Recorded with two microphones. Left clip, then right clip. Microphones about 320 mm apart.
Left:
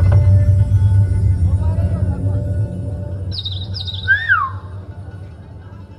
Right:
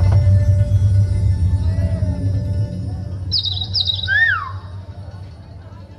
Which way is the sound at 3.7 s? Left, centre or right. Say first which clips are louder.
Right 1 dB; centre.